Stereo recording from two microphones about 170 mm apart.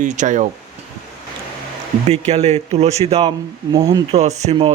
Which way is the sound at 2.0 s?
40° right (ahead or behind).